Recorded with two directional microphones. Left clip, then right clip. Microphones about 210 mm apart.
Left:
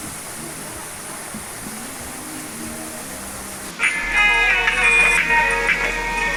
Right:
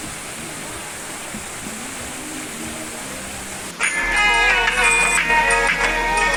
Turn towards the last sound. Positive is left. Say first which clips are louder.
# right 3 dB
turn(degrees=-40)  # may be behind; listen again after turning